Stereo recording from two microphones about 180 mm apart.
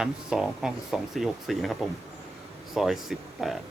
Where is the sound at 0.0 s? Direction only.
5° right (ahead or behind).